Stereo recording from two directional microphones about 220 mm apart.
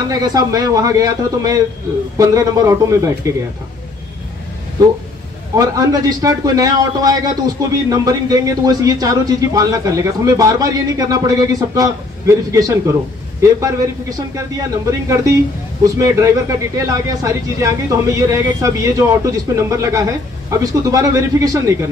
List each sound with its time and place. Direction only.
0.1 s a man's voice: 15° right (ahead or behind)
5.6 s a man's voice: 15° right (ahead or behind)